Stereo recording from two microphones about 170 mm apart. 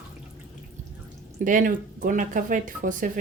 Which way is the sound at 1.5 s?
50° right (ahead or behind).